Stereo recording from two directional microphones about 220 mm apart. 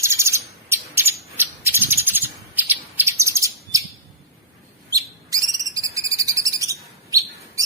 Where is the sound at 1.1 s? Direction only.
10° right (ahead or behind).